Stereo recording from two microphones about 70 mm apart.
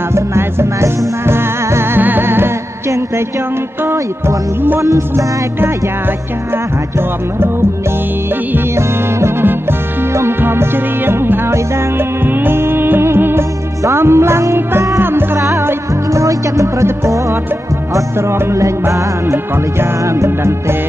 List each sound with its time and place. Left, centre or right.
0.1 s music: right
4.8 s music: right
8.5 s music: right
15.4 s music: right